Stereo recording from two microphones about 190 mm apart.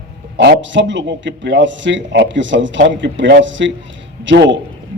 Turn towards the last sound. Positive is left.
turn(degrees=-70)  # may be behind; listen again after turning